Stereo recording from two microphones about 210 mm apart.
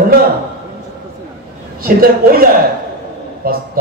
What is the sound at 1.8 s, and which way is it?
Speech, 45° right (ahead or behind).